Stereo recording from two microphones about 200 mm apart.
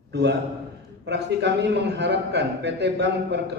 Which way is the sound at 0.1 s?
60° right (ahead or behind).